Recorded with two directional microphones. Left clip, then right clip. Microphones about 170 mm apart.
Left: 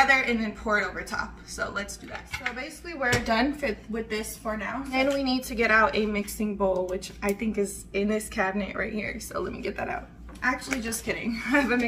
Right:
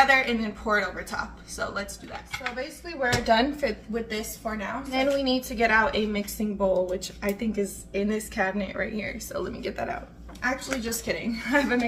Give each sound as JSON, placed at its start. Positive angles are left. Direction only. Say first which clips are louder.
{"t": 0.0, "sound": "speech", "louder": "right 1 dB", "side_deg": -15}
{"t": 3.3, "sound": "a woman's voice", "louder": "right 3 dB", "side_deg": -30}
{"t": 4.9, "sound": "a woman's voice", "louder": "right 1 dB", "side_deg": -20}
{"t": 6.6, "sound": "a woman's voice", "louder": "right 2 dB", "side_deg": -30}